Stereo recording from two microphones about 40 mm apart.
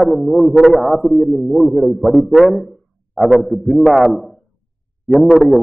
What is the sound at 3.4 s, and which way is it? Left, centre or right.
A man's voice, centre.